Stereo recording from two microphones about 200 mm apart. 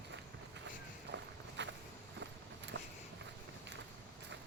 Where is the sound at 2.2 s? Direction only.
60° right (ahead or behind).